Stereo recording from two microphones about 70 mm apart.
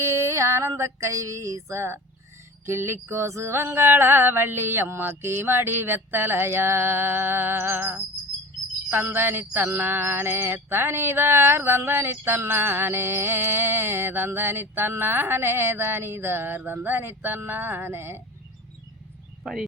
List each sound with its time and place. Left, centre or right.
0.0 s female singing: right
0.7 s a sound: right
19.4 s speech: centre